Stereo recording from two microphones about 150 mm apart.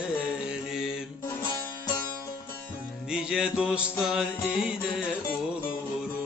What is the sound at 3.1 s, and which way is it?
Mantra, 5° right (ahead or behind).